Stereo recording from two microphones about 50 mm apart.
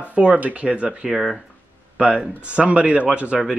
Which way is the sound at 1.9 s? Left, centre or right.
Right.